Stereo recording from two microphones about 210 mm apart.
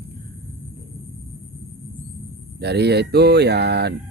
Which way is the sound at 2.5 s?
55° right (ahead or behind).